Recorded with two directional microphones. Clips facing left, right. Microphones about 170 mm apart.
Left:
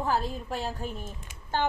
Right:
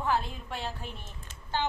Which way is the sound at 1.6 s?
55° left (ahead or behind).